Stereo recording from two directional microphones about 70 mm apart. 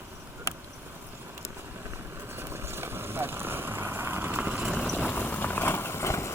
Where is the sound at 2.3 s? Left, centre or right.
Right.